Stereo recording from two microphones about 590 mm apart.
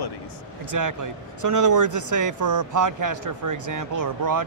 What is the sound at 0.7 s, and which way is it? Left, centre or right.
Speech, right.